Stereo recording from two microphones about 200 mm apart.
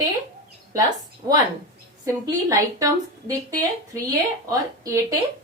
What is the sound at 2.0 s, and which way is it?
A woman's voice, 15° right (ahead or behind).